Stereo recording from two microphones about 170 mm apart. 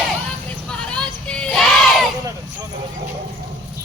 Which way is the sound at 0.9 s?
5° left (ahead or behind).